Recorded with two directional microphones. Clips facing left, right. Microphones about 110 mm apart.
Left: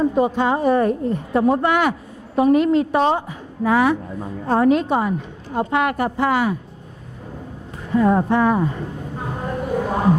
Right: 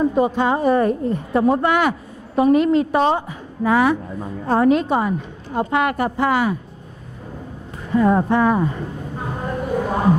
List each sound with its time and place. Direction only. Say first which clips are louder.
0.0 s a woman's voice: even; 20° right (ahead or behind)
7.9 s a woman's voice: even; 20° right (ahead or behind)
9.2 s a sound: even; 20° right (ahead or behind)